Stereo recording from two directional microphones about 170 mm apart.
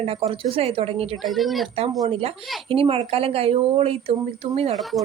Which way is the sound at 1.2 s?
Centre (ahead or behind).